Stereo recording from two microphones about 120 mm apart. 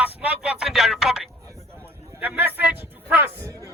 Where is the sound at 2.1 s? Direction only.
15° right (ahead or behind).